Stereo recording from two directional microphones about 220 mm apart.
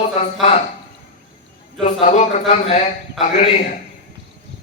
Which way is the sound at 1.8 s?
30° left (ahead or behind).